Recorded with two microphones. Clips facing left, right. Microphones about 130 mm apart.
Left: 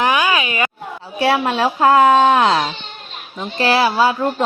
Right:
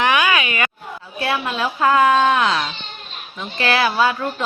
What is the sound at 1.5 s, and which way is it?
Speech, 30° left (ahead or behind).